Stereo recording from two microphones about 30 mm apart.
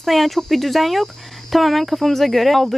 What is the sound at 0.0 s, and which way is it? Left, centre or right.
Speech, centre.